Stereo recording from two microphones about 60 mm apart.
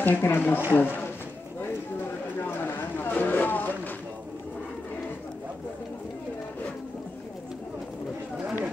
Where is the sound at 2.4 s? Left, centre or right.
Left.